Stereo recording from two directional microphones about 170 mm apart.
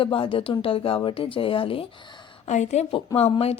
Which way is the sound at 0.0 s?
30° left (ahead or behind).